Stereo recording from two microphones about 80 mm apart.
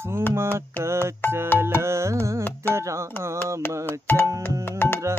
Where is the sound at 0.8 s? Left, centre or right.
Right.